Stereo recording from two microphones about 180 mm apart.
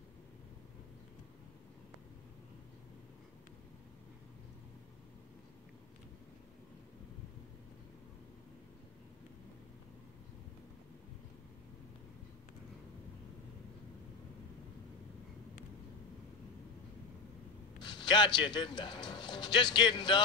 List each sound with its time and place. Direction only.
17.8 s speech: 25° left (ahead or behind)